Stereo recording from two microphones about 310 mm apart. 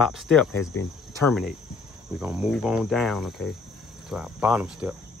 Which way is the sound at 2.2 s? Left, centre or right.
Centre.